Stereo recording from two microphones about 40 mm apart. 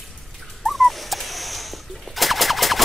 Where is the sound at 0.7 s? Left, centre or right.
Centre.